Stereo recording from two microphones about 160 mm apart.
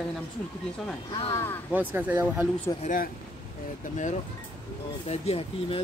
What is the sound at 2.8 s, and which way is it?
Speech, 60° left (ahead or behind).